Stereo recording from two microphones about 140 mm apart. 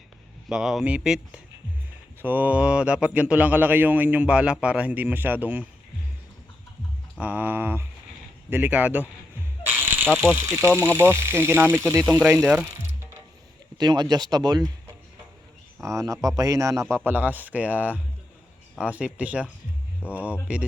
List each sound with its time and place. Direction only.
0.4 s speech: 5° right (ahead or behind)
7.2 s speech: 10° right (ahead or behind)
9.6 s snake: 15° right (ahead or behind)
10.3 s speech: 20° right (ahead or behind)
12.6 s ratchet: 20° right (ahead or behind)
13.7 s speech: 30° right (ahead or behind)
15.8 s speech: 20° right (ahead or behind)
16.9 s speech: 15° right (ahead or behind)